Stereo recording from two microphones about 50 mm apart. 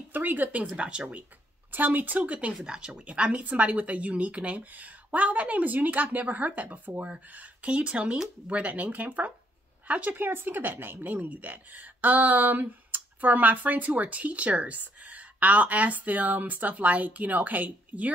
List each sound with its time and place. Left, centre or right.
0.1 s speech: right
0.7 s speech: right
1.7 s speech: right
2.6 s speech: centre
3.0 s speech: right